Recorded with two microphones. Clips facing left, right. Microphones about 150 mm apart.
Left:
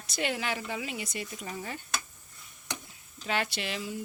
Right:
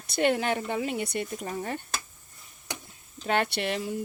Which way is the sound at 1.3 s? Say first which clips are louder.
Right 6 dB; 45° right (ahead or behind).